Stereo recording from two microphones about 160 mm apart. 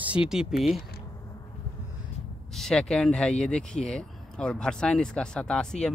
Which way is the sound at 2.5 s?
5° left (ahead or behind).